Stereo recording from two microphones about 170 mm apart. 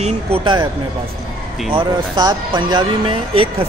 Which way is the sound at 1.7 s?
25° right (ahead or behind).